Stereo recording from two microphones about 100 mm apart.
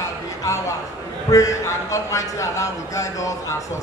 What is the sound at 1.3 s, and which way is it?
A man's voice, 35° left (ahead or behind).